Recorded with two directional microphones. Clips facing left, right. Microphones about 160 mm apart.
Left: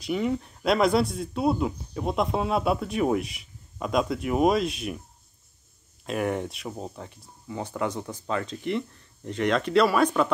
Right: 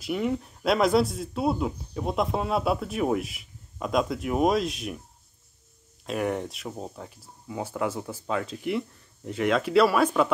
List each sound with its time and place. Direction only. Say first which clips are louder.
0.0 s speech: left 1 dB; centre (ahead or behind)
6.0 s speech: left 1 dB; centre (ahead or behind)